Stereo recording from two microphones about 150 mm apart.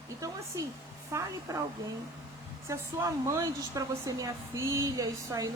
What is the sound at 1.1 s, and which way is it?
Speech, 20° right (ahead or behind).